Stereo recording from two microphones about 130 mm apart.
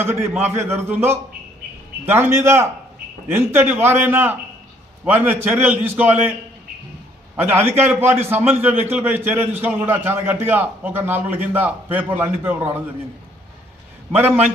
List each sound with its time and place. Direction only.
0.0 s a man's voice: 20° right (ahead or behind)
7.3 s a man's voice: 15° right (ahead or behind)
14.1 s a man's voice: 55° right (ahead or behind)